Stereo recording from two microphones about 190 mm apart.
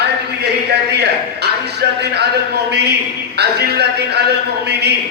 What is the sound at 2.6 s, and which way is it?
A man's voice, 60° right (ahead or behind).